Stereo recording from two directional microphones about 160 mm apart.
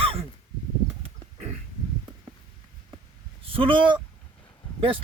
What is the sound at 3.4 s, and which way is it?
Speech, 35° right (ahead or behind).